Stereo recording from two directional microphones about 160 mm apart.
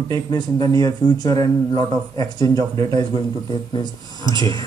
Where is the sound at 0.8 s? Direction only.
20° left (ahead or behind).